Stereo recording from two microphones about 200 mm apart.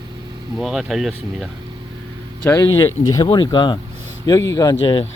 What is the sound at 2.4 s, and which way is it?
Speech, 10° left (ahead or behind).